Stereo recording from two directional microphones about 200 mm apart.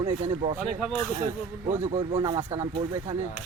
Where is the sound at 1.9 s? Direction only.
30° right (ahead or behind).